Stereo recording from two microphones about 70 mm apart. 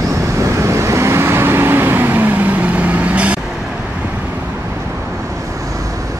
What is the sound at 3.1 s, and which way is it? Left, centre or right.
Vehicle, centre.